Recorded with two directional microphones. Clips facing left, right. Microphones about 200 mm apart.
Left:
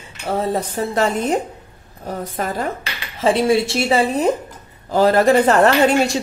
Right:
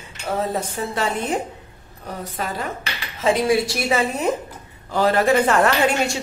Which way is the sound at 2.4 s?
45° left (ahead or behind).